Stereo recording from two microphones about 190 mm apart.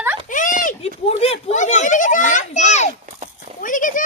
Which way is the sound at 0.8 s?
30° left (ahead or behind).